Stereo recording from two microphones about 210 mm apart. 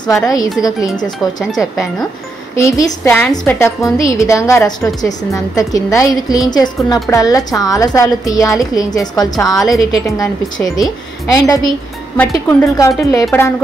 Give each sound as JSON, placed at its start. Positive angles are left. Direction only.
{"t": 0.0, "sound": "a woman's voice", "side_deg": 15}
{"t": 2.5, "sound": "a woman's voice", "side_deg": 15}